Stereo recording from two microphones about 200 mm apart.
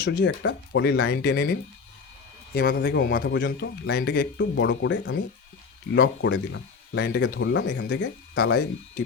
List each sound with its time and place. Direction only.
0.4 s speech: 55° left (ahead or behind)
5.9 s speech: 55° left (ahead or behind)